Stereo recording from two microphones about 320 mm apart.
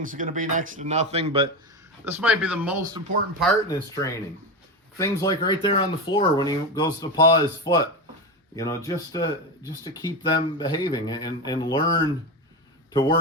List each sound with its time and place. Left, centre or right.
0.0 s speech: right
2.0 s speech: centre
3.4 s a man's voice: centre